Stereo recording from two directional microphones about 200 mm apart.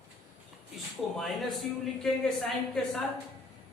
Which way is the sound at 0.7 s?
Centre (ahead or behind).